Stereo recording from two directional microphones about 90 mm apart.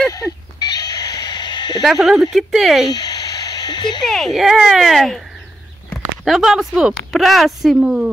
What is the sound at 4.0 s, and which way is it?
Speech, 5° left (ahead or behind).